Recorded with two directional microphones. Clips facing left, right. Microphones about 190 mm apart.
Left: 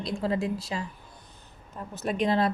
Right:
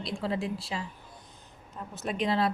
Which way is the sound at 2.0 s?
50° left (ahead or behind).